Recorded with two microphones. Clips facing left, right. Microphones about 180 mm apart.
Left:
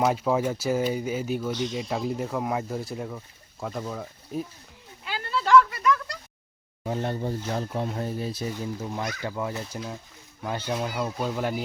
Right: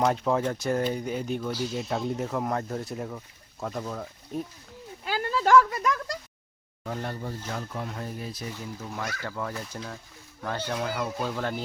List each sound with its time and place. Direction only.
0.0 s speech: 5° left (ahead or behind)
1.5 s speech: 5° right (ahead or behind)
5.0 s a sound: 40° right (ahead or behind)
6.8 s speech: 20° left (ahead or behind)